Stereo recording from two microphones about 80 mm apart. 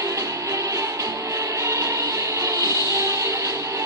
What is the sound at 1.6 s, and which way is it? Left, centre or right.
Music, right.